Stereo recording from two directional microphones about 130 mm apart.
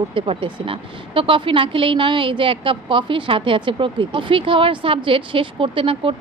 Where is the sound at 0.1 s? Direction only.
45° right (ahead or behind).